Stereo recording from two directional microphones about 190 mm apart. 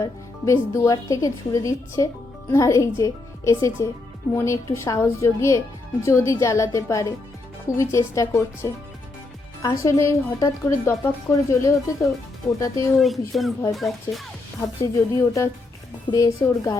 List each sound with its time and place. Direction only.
0.0 s speech: 15° left (ahead or behind)
13.0 s speech: centre (ahead or behind)
14.6 s a woman's voice: 15° left (ahead or behind)